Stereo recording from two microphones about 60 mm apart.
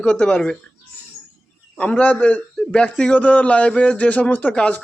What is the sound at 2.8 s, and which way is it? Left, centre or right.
A man's voice, centre.